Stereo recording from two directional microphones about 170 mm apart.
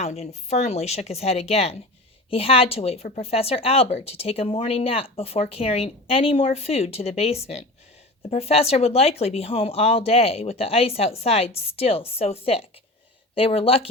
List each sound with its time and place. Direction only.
0.0 s speech: 40° left (ahead or behind)